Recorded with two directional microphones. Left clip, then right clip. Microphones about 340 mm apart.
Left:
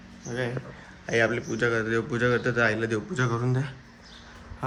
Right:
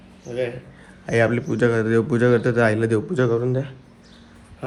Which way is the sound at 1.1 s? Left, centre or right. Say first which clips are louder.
Right 5 dB; centre.